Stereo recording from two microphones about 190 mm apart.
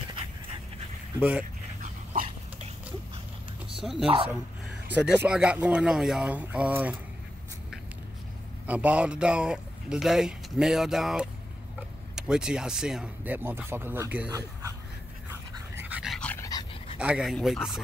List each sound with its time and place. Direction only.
3.7 s speech: centre (ahead or behind)
8.6 s a man's voice: 5° right (ahead or behind)
15.7 s dog: 10° right (ahead or behind); by 16.4 s 5° left (ahead or behind)
16.4 s dog: 20° left (ahead or behind)
17.0 s a man's voice: 5° right (ahead or behind)